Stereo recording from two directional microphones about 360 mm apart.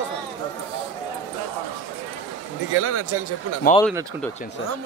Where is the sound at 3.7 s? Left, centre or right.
Left.